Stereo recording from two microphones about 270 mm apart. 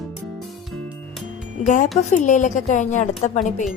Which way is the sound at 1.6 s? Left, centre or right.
Left.